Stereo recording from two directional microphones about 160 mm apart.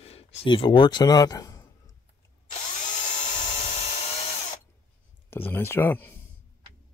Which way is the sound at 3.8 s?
40° left (ahead or behind).